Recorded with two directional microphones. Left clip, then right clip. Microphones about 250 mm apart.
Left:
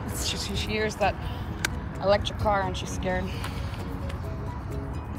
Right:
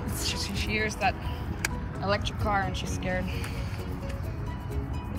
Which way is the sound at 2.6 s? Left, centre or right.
Right.